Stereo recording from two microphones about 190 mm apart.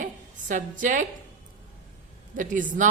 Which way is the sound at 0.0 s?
45° right (ahead or behind).